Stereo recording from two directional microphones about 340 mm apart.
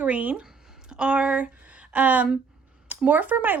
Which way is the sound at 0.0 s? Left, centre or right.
Centre.